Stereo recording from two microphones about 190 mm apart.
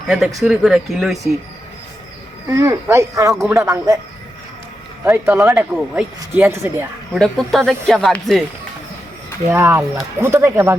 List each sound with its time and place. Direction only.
0.4 s speech: 5° right (ahead or behind)
2.5 s speech: 15° right (ahead or behind)
5.0 s speech: 10° right (ahead or behind)
7.1 s speech: centre (ahead or behind)
9.5 s speech: 15° right (ahead or behind)